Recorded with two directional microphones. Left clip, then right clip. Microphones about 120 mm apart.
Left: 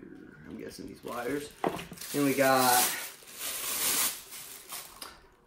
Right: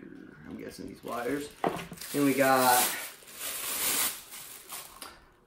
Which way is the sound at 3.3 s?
10° right (ahead or behind).